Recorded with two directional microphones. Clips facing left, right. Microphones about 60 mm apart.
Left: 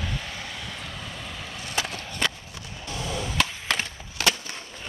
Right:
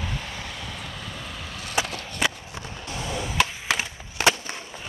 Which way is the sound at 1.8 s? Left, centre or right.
Centre.